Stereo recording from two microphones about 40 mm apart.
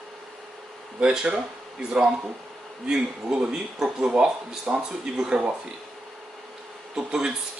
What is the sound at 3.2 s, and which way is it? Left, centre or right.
Speech, right.